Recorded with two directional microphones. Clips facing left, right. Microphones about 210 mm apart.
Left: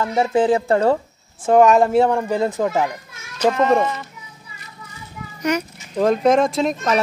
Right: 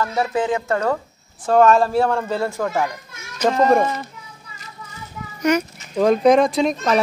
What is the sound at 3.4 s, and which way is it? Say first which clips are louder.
Speech: left 1 dB; 5° left (ahead or behind).